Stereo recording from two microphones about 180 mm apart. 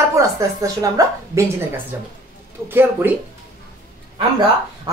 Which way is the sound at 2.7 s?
10° right (ahead or behind).